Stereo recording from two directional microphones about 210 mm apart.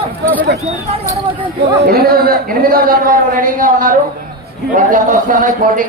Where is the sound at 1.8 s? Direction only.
45° right (ahead or behind).